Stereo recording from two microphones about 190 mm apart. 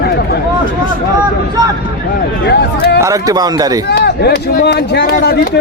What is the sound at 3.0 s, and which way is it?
Speech, 15° right (ahead or behind).